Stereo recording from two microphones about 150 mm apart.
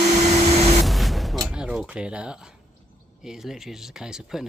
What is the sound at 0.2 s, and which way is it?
Printer, 45° right (ahead or behind).